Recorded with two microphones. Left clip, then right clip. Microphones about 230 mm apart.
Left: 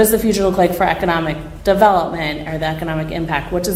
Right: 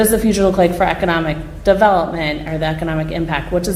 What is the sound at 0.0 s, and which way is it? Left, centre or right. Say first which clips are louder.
A woman's voice: even; right.